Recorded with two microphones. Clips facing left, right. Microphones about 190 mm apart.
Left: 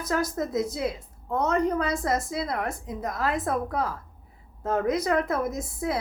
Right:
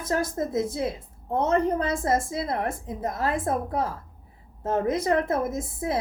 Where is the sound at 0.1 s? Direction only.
25° right (ahead or behind).